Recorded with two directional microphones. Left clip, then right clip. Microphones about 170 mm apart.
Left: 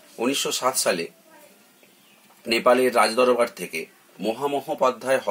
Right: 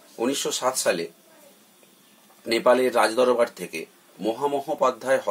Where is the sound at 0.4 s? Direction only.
10° right (ahead or behind).